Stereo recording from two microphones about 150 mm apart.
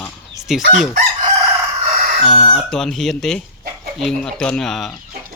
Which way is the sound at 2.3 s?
40° left (ahead or behind).